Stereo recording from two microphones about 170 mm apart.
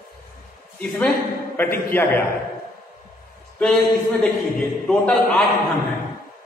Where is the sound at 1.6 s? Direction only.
15° left (ahead or behind).